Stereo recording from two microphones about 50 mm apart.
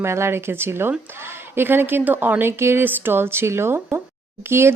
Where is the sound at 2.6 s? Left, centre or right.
Right.